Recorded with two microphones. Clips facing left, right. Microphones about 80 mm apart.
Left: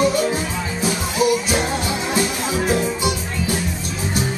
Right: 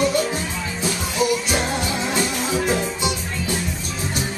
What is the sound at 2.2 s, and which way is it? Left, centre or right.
Music, centre.